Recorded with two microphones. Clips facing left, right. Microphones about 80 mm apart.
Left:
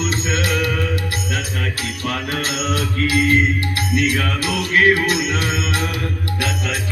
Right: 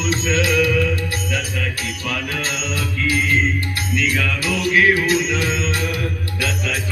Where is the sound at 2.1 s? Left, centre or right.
Left.